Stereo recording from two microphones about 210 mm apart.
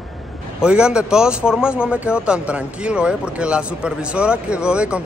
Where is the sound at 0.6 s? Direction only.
5° right (ahead or behind).